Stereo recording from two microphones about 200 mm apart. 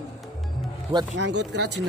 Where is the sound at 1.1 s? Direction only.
60° right (ahead or behind).